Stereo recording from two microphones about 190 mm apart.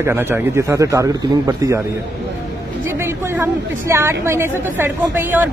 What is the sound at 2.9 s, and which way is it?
A woman's voice, 10° right (ahead or behind).